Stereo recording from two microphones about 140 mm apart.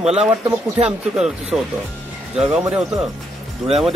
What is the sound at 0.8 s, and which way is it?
Speech, 5° right (ahead or behind).